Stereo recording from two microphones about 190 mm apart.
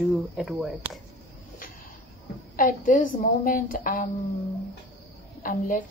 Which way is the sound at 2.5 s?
45° left (ahead or behind).